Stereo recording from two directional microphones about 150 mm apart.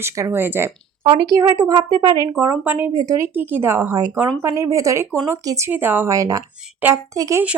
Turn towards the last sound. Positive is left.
turn(degrees=-20)  # may be behind; listen again after turning